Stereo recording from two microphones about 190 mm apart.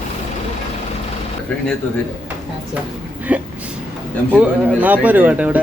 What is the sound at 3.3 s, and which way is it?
Speech, 5° right (ahead or behind).